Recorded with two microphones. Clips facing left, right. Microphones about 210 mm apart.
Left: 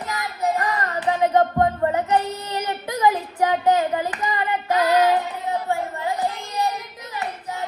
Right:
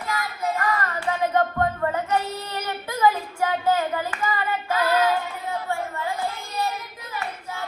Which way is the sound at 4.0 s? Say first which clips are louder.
Left 2 dB; 15° left (ahead or behind).